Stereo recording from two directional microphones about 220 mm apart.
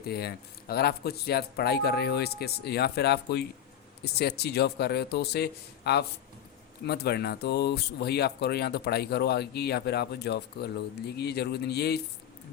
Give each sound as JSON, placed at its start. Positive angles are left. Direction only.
{"t": 0.0, "sound": "speech", "side_deg": 45}